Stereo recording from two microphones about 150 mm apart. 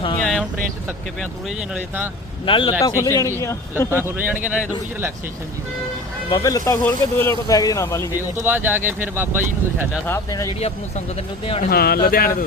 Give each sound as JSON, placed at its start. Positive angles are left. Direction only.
{"t": 0.2, "sound": "vehicle", "side_deg": 5}
{"t": 2.5, "sound": "speech", "side_deg": 30}
{"t": 3.9, "sound": "speech", "side_deg": -15}
{"t": 6.3, "sound": "speech", "side_deg": 25}
{"t": 8.1, "sound": "speech", "side_deg": -15}
{"t": 10.1, "sound": "speech", "side_deg": 20}
{"t": 11.7, "sound": "speech", "side_deg": 90}